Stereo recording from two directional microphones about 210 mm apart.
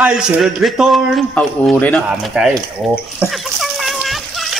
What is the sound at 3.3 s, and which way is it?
Splash, centre (ahead or behind).